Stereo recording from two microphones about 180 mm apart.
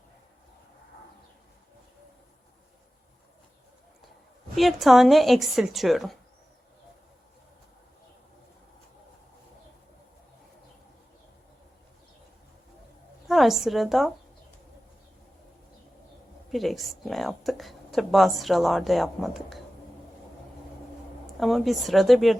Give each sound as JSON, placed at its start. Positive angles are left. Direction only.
{"t": 4.5, "sound": "a woman's voice", "side_deg": 0}
{"t": 13.2, "sound": "a woman's voice", "side_deg": 0}
{"t": 16.5, "sound": "a woman's voice", "side_deg": 0}
{"t": 21.3, "sound": "a woman's voice", "side_deg": 0}